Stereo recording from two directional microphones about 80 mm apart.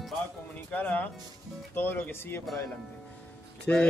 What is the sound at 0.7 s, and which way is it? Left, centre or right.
Speech, centre.